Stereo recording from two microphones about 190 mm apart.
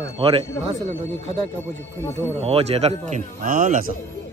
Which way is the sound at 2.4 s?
35° right (ahead or behind).